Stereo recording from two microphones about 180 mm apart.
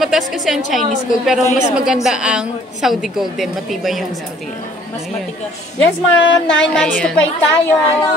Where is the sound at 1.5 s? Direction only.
40° left (ahead or behind).